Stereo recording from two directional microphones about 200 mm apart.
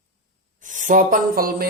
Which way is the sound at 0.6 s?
40° right (ahead or behind).